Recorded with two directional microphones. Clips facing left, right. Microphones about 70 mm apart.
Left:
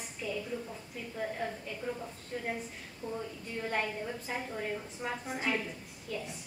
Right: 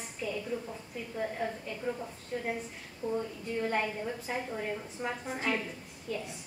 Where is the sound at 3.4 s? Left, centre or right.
Centre.